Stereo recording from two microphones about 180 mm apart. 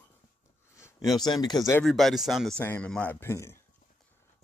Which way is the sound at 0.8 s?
20° left (ahead or behind).